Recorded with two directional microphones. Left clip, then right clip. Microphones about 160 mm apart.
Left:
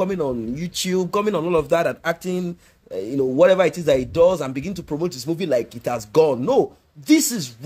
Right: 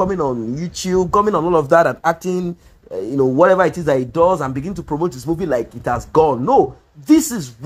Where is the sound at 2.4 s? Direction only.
Centre (ahead or behind).